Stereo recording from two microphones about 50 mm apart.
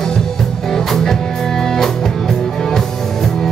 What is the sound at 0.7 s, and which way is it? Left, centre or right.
Music, centre.